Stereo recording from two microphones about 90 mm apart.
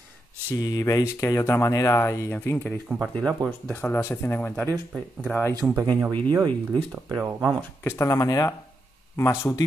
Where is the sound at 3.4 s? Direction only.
50° right (ahead or behind).